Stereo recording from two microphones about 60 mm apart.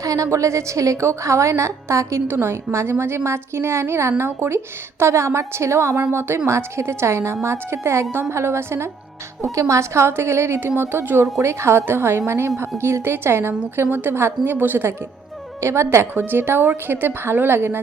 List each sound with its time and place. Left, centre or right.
0.0 s a woman's voice: right
2.2 s a woman's voice: right
9.4 s a woman's voice: right
15.6 s a woman's voice: right
16.1 s speech: right